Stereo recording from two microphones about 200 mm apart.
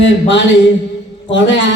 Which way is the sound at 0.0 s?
65° left (ahead or behind).